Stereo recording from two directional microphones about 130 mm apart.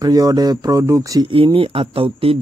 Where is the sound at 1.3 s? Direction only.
40° right (ahead or behind).